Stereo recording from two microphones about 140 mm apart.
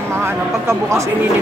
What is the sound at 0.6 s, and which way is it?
Speech, 20° right (ahead or behind).